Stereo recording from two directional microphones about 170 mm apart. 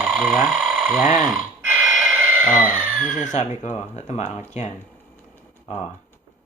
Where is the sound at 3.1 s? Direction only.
5° left (ahead or behind).